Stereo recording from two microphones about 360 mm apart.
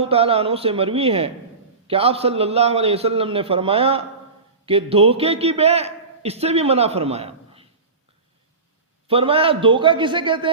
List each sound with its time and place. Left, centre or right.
0.0 s a man's voice: centre
9.0 s a man's voice: centre